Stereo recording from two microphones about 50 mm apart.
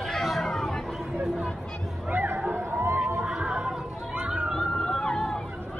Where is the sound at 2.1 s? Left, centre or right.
Right.